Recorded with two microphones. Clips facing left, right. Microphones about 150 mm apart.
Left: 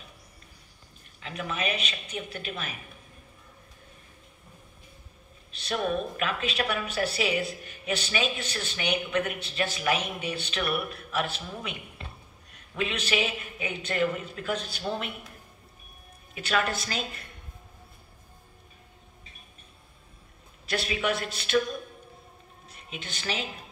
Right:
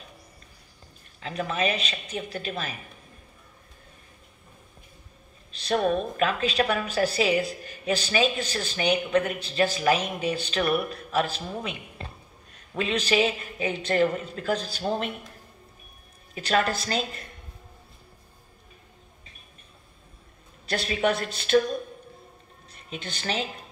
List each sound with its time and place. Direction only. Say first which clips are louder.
1.2 s a woman's voice: right 5 dB; 35° right (ahead or behind)
5.7 s a woman's voice: right 5 dB; 40° right (ahead or behind)
16.3 s a woman's voice: right 3 dB; 35° right (ahead or behind)
20.9 s a woman's voice: right 6 dB; 40° right (ahead or behind)
22.8 s a woman's voice: right 3 dB; 35° right (ahead or behind)